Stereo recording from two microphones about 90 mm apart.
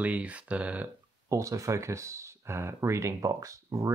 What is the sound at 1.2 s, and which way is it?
Speech, 35° right (ahead or behind).